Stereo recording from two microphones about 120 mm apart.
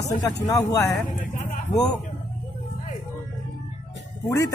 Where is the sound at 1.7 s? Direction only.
30° left (ahead or behind).